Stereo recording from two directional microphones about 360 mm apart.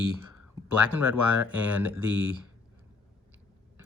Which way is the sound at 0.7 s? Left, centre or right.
Right.